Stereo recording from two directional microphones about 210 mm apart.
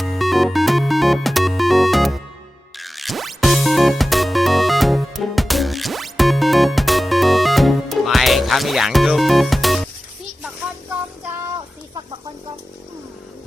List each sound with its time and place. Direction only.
0.0 s music: centre (ahead or behind)